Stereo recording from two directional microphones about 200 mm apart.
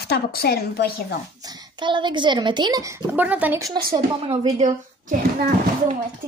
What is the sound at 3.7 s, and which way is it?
A woman's voice, 25° right (ahead or behind).